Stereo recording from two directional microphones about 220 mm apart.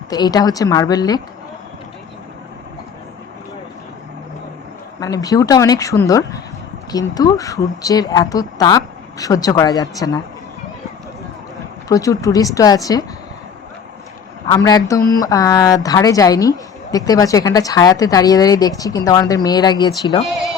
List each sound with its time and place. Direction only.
0.1 s a woman's voice: 15° left (ahead or behind)
4.9 s a woman's voice: 15° left (ahead or behind)
11.9 s a woman's voice: 15° left (ahead or behind)
14.4 s a woman's voice: 15° left (ahead or behind)